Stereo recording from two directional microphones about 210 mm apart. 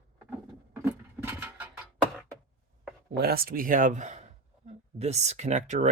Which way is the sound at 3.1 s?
45° right (ahead or behind).